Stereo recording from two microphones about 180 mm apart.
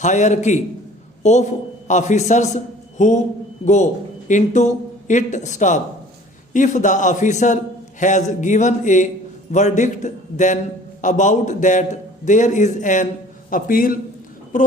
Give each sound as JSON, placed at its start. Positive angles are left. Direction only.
{"t": 0.0, "sound": "a man's voice", "side_deg": 40}